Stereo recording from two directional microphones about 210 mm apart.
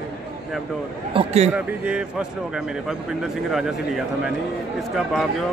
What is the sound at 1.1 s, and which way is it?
Speech, 30° right (ahead or behind).